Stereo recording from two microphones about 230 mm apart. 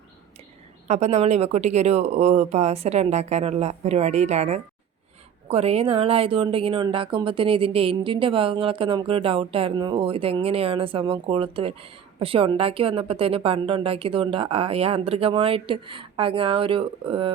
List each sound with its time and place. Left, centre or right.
0.9 s speech: right